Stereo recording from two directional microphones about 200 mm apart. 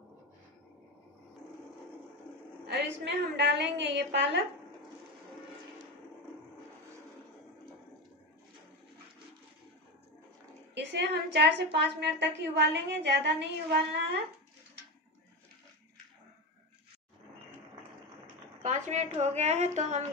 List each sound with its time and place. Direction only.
2.7 s a woman's voice: 60° right (ahead or behind)
10.7 s a woman's voice: 60° right (ahead or behind)
18.6 s a woman's voice: 35° right (ahead or behind)